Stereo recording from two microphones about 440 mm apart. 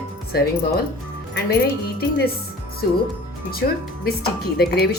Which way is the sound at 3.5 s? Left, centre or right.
Centre.